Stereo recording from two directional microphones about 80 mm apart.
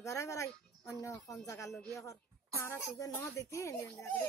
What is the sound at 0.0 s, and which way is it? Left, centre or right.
Speech, left.